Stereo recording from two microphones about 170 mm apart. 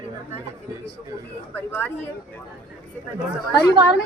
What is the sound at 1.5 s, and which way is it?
Speech, 10° left (ahead or behind).